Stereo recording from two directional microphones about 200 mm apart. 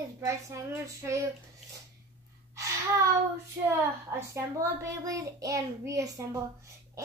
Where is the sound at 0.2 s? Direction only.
15° right (ahead or behind).